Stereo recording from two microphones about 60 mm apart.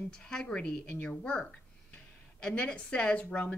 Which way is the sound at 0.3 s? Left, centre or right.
Centre.